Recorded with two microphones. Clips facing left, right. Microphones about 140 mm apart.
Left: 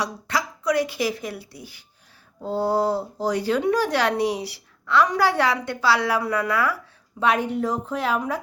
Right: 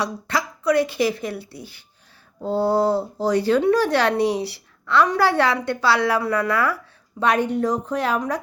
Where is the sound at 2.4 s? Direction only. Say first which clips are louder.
Right 3 dB; 30° right (ahead or behind).